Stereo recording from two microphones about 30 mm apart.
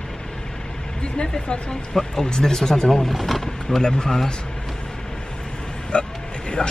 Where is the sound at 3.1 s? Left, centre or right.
Centre.